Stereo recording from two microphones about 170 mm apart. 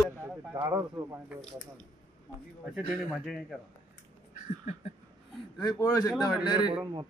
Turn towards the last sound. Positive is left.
turn(degrees=0)  # may be behind; listen again after turning